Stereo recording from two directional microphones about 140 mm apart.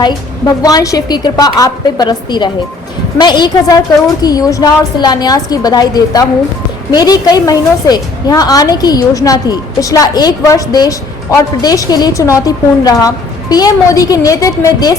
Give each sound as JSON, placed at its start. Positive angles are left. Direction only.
{"t": 0.0, "sound": "a woman's voice", "side_deg": 25}